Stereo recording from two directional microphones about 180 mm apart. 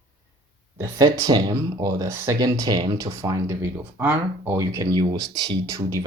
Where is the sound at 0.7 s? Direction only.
20° right (ahead or behind).